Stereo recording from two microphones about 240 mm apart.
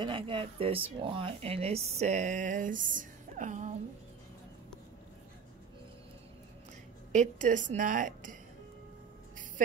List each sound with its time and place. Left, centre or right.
0.0 s speech: right
7.1 s speech: right